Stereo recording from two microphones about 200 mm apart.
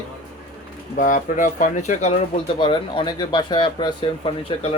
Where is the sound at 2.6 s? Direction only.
25° left (ahead or behind).